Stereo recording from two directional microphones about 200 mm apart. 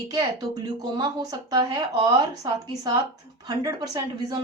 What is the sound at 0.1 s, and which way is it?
Speech, 20° right (ahead or behind).